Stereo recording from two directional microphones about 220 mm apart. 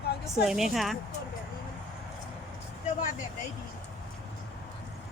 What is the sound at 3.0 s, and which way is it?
Speech, 35° left (ahead or behind).